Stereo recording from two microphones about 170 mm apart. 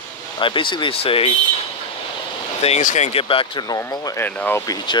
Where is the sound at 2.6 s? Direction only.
45° left (ahead or behind).